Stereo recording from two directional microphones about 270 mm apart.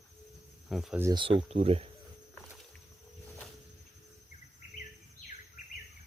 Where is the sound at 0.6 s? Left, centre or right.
Centre; by 1.8 s right.